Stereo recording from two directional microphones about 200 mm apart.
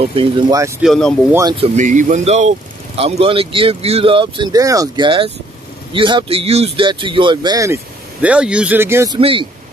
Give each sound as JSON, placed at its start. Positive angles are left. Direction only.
{"t": 0.0, "sound": "speech", "side_deg": -30}
{"t": 0.8, "sound": "speech", "side_deg": 5}
{"t": 1.6, "sound": "speech", "side_deg": -40}
{"t": 9.2, "sound": "speech", "side_deg": -25}